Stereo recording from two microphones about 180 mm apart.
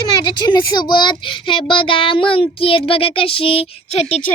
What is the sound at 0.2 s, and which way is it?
A child's voice, 25° left (ahead or behind).